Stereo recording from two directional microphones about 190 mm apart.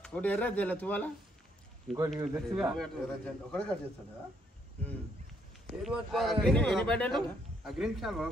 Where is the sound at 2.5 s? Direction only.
Centre (ahead or behind).